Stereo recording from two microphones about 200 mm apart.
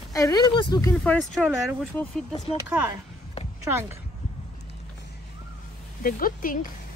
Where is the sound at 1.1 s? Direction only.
Centre (ahead or behind).